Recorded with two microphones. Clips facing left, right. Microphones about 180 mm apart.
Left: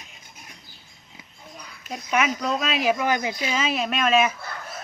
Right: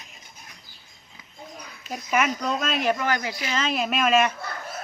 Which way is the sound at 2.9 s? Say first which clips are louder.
Left 2 dB; 15° left (ahead or behind).